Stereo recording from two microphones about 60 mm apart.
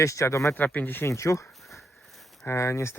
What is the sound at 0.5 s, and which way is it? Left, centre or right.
Speech, left.